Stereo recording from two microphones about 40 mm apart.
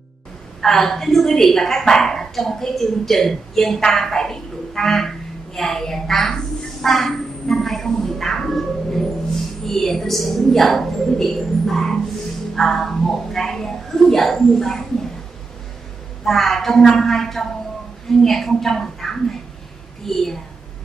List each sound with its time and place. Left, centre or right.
0.6 s a woman's voice: centre
16.3 s a woman's voice: centre